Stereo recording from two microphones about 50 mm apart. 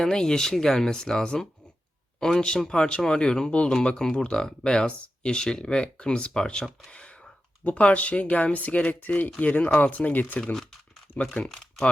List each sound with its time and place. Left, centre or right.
0.0 s speech: centre; by 10.4 s left
10.5 s crumpling: centre
11.4 s speech: centre